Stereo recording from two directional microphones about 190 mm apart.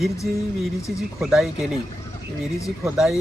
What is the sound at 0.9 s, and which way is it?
Speech, centre (ahead or behind).